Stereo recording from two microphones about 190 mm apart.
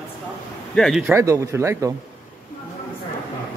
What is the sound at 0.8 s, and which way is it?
Speech, centre (ahead or behind).